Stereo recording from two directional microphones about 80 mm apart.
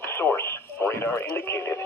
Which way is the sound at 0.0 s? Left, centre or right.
Left.